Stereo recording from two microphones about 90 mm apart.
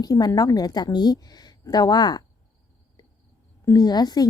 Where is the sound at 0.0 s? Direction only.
45° left (ahead or behind).